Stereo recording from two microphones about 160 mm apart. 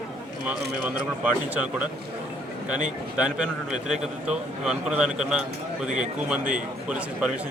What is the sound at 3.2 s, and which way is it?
A man's voice, 5° right (ahead or behind).